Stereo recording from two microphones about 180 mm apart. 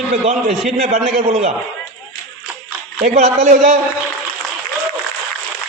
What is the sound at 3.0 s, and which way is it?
Speech, 40° right (ahead or behind).